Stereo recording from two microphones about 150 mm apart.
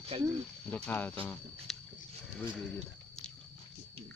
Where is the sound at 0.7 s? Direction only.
10° left (ahead or behind).